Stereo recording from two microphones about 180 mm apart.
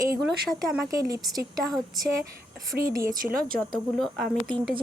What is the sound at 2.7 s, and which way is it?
Speech, centre (ahead or behind).